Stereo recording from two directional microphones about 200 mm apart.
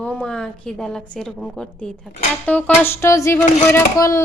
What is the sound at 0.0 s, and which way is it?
A woman's voice, 5° left (ahead or behind).